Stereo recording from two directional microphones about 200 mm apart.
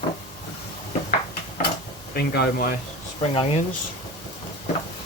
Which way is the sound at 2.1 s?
55° left (ahead or behind).